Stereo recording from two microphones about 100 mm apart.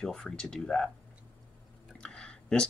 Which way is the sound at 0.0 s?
10° left (ahead or behind).